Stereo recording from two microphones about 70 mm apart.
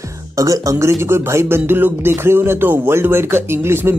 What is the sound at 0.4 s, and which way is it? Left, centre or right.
A man's voice, right.